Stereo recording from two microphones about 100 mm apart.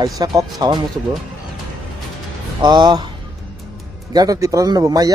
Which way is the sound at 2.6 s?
45° right (ahead or behind).